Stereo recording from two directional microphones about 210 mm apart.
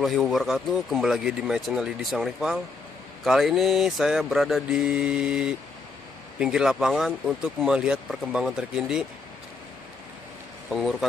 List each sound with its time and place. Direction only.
0.0 s speech: centre (ahead or behind)
10.7 s speech: centre (ahead or behind)